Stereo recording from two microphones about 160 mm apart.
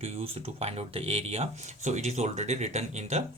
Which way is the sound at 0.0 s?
40° right (ahead or behind).